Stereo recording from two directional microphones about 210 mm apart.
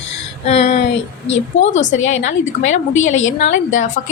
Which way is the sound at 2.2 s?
35° left (ahead or behind).